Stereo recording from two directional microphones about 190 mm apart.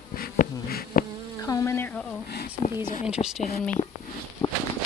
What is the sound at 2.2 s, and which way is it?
Speech, 55° left (ahead or behind).